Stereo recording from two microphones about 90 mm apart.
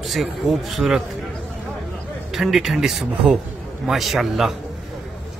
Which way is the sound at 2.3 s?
5° right (ahead or behind).